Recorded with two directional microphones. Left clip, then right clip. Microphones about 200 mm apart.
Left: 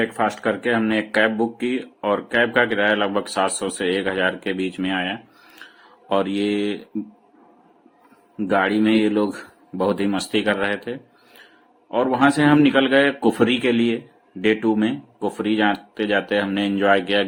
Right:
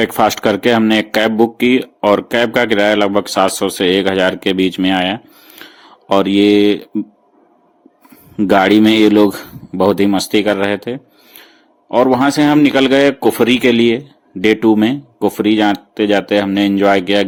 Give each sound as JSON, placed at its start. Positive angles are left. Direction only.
{"t": 0.0, "sound": "speech", "side_deg": -45}
{"t": 5.6, "sound": "a sound", "side_deg": -40}
{"t": 6.1, "sound": "speech", "side_deg": -40}
{"t": 8.4, "sound": "speech", "side_deg": -45}